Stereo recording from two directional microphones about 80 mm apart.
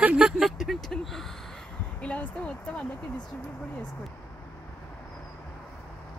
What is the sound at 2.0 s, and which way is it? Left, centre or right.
Speech, centre.